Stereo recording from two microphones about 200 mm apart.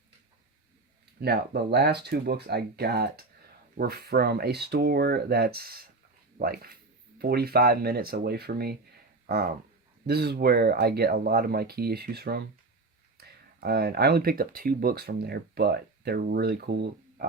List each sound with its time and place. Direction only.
1.2 s speech: 55° right (ahead or behind)